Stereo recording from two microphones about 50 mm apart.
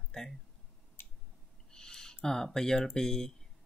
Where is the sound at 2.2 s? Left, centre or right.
Centre.